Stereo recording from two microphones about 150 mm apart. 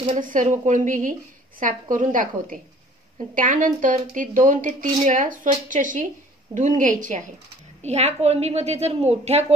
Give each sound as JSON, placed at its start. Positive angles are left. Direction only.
{"t": 0.0, "sound": "a woman's voice", "side_deg": -55}
{"t": 7.8, "sound": "a woman's voice", "side_deg": -45}